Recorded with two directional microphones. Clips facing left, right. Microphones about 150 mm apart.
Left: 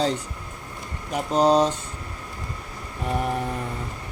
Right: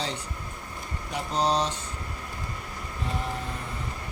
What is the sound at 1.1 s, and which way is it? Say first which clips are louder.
Speech: left 7 dB; 45° left (ahead or behind).